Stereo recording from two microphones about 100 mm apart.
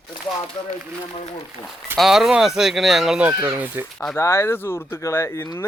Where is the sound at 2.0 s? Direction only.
5° right (ahead or behind).